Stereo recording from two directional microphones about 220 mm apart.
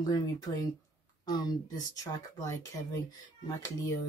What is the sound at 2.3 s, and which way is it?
Speech, 15° left (ahead or behind).